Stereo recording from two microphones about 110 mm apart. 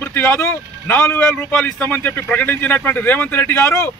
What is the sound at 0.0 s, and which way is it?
A man's voice, 15° left (ahead or behind).